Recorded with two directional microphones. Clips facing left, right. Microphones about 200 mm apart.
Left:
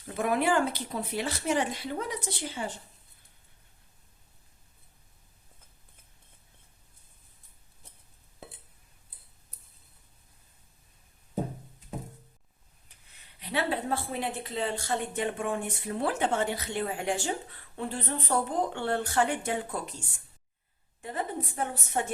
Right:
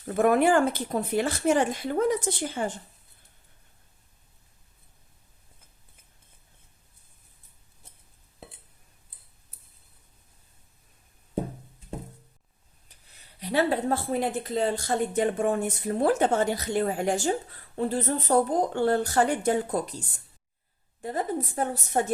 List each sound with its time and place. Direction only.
0.1 s speech: 50° right (ahead or behind)
12.9 s a woman's voice: 40° right (ahead or behind)